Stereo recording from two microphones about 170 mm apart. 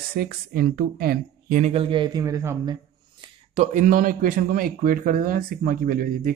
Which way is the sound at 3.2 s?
40° right (ahead or behind).